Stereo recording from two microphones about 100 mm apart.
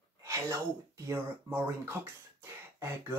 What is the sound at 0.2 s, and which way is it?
Speech, 30° right (ahead or behind).